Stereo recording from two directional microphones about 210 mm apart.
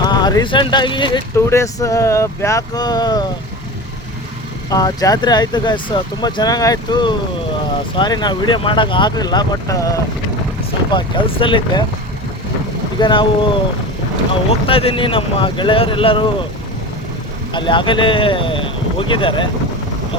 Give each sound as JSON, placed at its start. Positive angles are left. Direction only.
{"t": 0.0, "sound": "speech", "side_deg": 20}
{"t": 4.7, "sound": "speech", "side_deg": 15}
{"t": 13.0, "sound": "speech", "side_deg": 20}
{"t": 14.7, "sound": "speech", "side_deg": 25}
{"t": 17.5, "sound": "speech", "side_deg": 20}